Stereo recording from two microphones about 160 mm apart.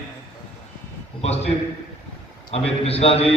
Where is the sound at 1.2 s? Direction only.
40° left (ahead or behind).